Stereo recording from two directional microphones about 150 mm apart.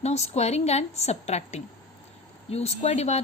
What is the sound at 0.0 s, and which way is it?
Speech, 45° left (ahead or behind).